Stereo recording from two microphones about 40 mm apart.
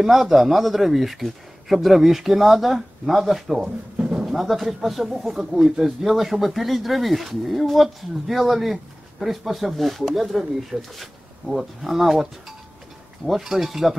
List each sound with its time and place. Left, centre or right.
0.0 s speech: centre
3.6 s drawer open or close: right
4.3 s speech: centre